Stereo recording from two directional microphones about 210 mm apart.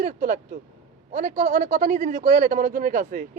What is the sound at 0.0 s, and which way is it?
A man's voice, 40° right (ahead or behind).